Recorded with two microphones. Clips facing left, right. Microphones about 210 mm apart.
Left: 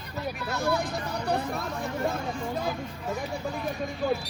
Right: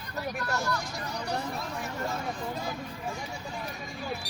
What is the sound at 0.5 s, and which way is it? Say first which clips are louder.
Speech: left 7 dB; 55° left (ahead or behind).